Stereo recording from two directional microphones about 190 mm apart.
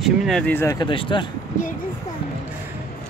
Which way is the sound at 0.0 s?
5° left (ahead or behind).